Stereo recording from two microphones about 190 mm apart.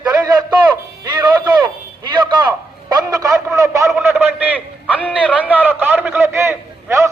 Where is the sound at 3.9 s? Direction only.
Centre (ahead or behind).